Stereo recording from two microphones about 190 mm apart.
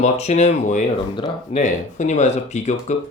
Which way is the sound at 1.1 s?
25° left (ahead or behind).